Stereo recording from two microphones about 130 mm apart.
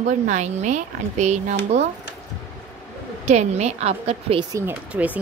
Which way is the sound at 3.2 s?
60° right (ahead or behind).